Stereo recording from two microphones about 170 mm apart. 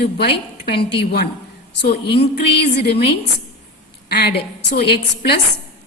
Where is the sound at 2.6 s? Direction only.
75° left (ahead or behind).